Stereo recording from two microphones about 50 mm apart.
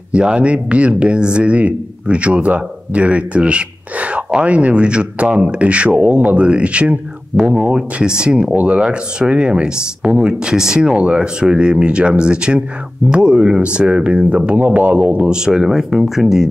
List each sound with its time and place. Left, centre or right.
0.1 s speech: right
15.2 s speech: centre